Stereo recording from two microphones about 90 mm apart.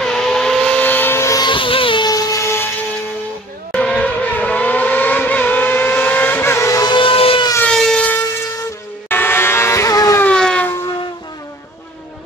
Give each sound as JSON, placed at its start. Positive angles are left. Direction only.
{"t": 0.0, "sound": "vehicle", "side_deg": 5}
{"t": 1.4, "sound": "vehicle", "side_deg": 70}
{"t": 2.0, "sound": "a sound", "side_deg": 40}
{"t": 3.7, "sound": "vehicle", "side_deg": 10}
{"t": 6.8, "sound": "a sound", "side_deg": 65}
{"t": 7.6, "sound": "siren", "side_deg": 5}
{"t": 9.1, "sound": "vehicle", "side_deg": 25}
{"t": 10.2, "sound": "siren", "side_deg": 10}